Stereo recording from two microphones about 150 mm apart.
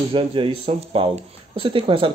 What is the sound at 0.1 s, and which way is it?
Speech, 35° right (ahead or behind).